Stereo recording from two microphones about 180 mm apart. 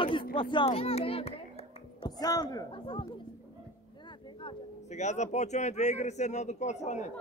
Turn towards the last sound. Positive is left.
turn(degrees=40)  # may be behind; listen again after turning